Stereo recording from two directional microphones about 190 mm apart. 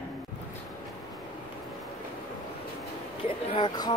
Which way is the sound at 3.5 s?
25° left (ahead or behind).